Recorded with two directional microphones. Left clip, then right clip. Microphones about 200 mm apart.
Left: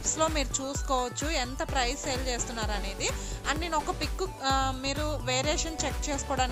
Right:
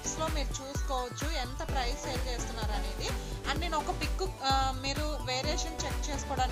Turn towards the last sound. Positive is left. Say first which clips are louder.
# left 3 dB
turn(degrees=35)  # may be behind; listen again after turning